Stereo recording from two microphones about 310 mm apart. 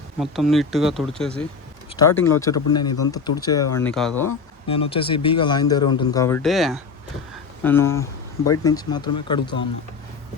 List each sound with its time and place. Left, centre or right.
0.2 s speech: centre
4.7 s speech: centre